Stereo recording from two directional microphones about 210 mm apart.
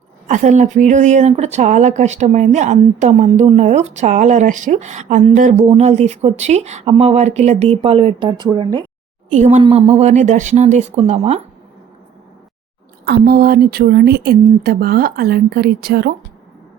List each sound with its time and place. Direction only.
0.3 s speech: 35° right (ahead or behind); by 8.8 s 20° right (ahead or behind)
9.3 s speech: 35° right (ahead or behind)
13.1 s speech: 50° right (ahead or behind)